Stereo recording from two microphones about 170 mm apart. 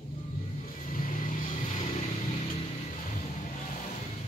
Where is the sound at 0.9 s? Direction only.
50° left (ahead or behind).